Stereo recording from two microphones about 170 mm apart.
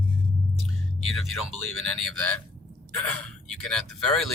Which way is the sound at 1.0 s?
Centre (ahead or behind).